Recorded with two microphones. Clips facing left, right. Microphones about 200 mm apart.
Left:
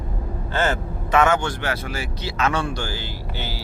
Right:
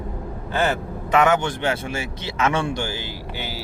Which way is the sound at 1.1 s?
20° right (ahead or behind).